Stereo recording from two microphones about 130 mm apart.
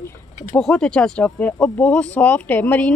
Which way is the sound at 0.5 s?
5° left (ahead or behind).